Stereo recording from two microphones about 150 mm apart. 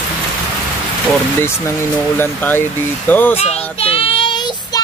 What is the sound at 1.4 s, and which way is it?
Speech, 15° left (ahead or behind).